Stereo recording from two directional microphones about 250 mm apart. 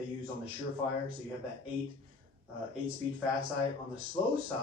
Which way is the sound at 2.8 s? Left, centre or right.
Right.